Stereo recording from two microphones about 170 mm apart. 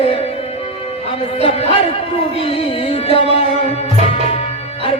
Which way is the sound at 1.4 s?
35° left (ahead or behind).